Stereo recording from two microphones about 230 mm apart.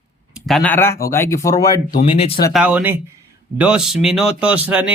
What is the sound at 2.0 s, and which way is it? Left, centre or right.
Speech, left.